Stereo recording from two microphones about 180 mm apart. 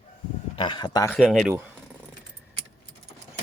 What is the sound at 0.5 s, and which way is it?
Speech, 25° left (ahead or behind).